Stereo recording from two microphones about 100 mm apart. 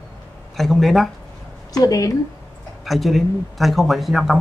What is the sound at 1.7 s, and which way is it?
Speech, 40° left (ahead or behind).